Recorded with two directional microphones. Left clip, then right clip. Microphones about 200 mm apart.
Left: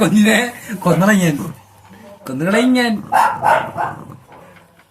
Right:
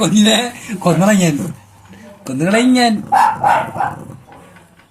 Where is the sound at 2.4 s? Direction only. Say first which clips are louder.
Right 2 dB; centre (ahead or behind).